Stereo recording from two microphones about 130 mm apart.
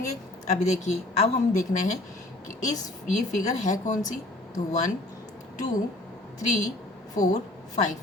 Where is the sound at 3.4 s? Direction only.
70° left (ahead or behind).